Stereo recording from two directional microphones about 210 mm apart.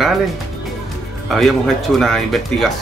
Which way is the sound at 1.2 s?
Centre (ahead or behind).